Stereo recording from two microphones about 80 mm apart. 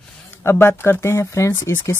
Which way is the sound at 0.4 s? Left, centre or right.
Left.